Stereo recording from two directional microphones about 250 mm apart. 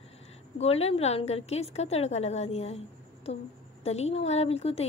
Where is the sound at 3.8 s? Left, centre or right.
Left.